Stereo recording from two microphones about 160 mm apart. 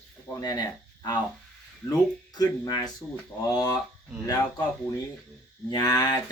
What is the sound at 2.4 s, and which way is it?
Speech, 25° left (ahead or behind).